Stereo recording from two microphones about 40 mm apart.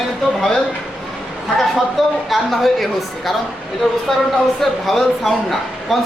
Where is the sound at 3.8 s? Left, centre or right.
Centre.